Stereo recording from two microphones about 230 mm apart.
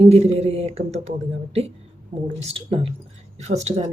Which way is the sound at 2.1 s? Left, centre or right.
Right.